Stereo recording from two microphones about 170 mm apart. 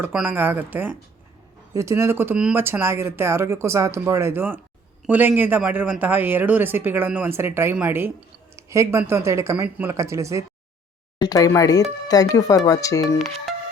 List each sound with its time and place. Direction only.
0.0 s speech: 10° right (ahead or behind)
11.2 s speech: 20° left (ahead or behind)